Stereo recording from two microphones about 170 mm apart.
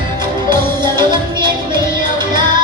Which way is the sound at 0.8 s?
25° right (ahead or behind).